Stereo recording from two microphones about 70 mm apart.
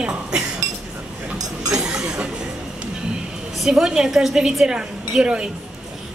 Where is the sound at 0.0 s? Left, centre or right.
Centre.